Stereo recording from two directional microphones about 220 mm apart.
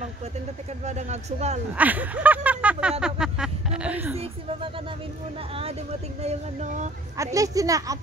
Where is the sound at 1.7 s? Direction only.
5° right (ahead or behind).